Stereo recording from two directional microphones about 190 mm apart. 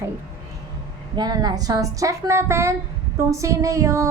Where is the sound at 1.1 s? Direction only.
20° right (ahead or behind).